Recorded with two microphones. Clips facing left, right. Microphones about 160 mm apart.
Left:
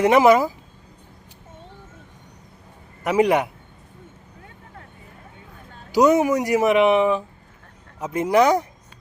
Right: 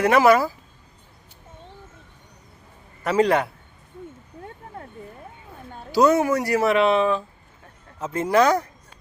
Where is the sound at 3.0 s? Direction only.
15° left (ahead or behind).